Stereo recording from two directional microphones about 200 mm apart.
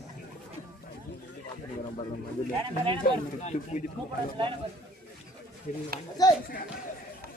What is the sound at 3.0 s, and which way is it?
Speech, 35° left (ahead or behind).